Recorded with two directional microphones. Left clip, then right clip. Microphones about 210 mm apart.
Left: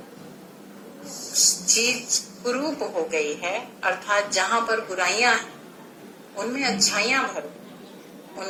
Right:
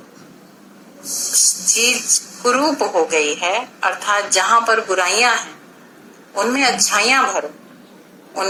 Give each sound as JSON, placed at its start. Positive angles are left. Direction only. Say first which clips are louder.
{"t": 1.3, "sound": "a woman's voice", "louder": "right 3 dB", "side_deg": -30}